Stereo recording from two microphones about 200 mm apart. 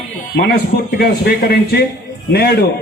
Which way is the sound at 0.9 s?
50° left (ahead or behind).